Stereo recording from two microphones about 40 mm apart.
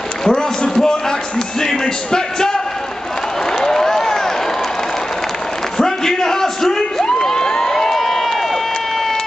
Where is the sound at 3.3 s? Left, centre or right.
Centre.